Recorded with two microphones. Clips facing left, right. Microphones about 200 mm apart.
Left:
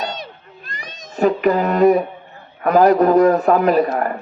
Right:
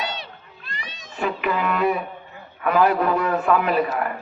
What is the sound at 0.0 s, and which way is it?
Cat, 45° left (ahead or behind).